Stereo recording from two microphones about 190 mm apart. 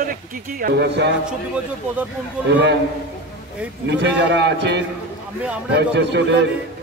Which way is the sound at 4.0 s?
65° right (ahead or behind).